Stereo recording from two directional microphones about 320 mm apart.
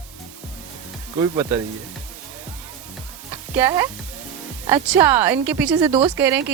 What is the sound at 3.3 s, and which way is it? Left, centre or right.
Music, centre.